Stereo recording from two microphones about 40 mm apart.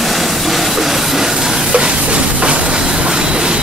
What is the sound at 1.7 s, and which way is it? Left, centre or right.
Music, right.